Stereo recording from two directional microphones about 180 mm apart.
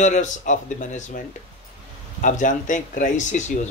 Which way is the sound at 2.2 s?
45° left (ahead or behind).